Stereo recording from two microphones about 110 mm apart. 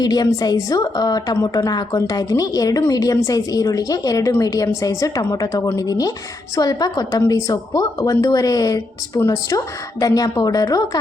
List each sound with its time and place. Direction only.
0.0 s a woman's voice: 35° left (ahead or behind)